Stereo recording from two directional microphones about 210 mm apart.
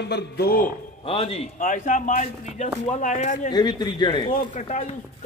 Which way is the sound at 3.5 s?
20° left (ahead or behind).